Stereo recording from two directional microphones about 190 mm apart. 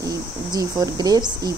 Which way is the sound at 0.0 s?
20° right (ahead or behind).